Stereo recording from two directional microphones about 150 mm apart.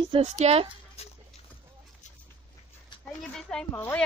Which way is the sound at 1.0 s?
45° left (ahead or behind).